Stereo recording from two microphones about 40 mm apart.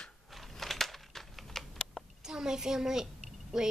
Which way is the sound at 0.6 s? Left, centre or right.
Centre.